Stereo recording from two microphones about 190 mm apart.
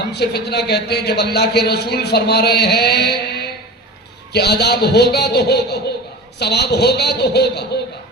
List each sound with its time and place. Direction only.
0.1 s a man's voice: 60° left (ahead or behind)